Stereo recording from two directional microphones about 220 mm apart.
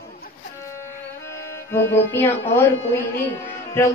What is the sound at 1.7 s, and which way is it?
A woman's voice, 10° left (ahead or behind).